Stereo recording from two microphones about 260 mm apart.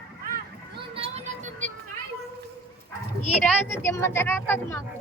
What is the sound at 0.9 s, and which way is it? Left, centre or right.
Music, right.